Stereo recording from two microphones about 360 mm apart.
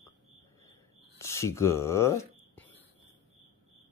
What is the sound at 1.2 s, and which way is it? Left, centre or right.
Whispering, centre.